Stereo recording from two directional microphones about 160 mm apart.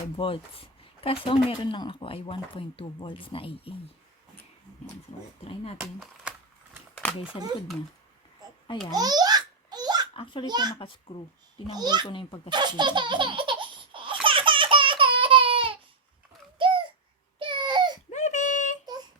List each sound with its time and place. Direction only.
0.2 s speech: 35° left (ahead or behind)
5.8 s speech: centre (ahead or behind)
6.9 s a sound: 10° left (ahead or behind)
8.9 s babbling: 25° right (ahead or behind)
10.2 s speech: 30° left (ahead or behind)
10.4 s a child's voice: 25° right (ahead or behind)
10.8 s speech: 35° left (ahead or behind)
11.7 s a child's voice: 25° right (ahead or behind)
12.0 s speech: 30° left (ahead or behind)
12.5 s laughter: 30° right (ahead or behind)
16.6 s a sound: 30° right (ahead or behind)
17.4 s baby cry: 30° right (ahead or behind)
18.1 s a sound: 50° left (ahead or behind)